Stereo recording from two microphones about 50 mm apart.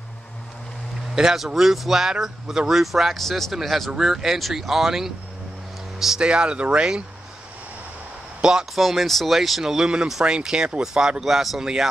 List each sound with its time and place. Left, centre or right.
1.1 s speech: centre
8.4 s speech: centre
8.7 s speech: centre